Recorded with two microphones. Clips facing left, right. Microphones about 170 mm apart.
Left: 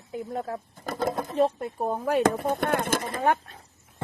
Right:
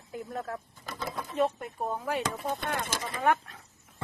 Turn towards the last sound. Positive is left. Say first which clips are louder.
# left 2 dB
turn(degrees=30)  # may be behind; listen again after turning